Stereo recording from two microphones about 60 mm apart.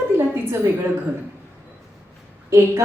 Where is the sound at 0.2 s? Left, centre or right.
Right.